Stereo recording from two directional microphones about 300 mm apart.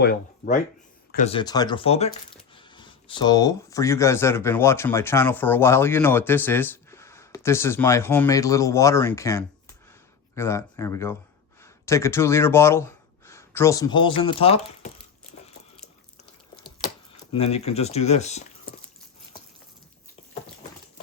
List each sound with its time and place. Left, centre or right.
0.0 s speech: left
16.6 s speech: centre